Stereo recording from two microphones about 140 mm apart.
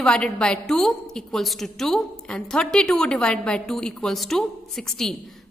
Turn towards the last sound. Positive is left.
turn(degrees=0)  # may be behind; listen again after turning